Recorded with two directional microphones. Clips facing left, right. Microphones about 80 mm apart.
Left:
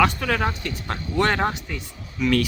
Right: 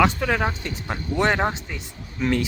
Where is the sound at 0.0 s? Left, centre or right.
Centre.